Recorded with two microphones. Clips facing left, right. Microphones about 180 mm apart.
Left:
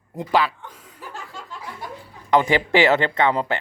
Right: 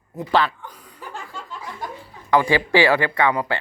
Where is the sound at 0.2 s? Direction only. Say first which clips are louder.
Even; 10° left (ahead or behind).